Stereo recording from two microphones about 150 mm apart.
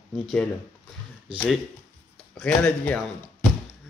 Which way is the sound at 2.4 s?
10° left (ahead or behind).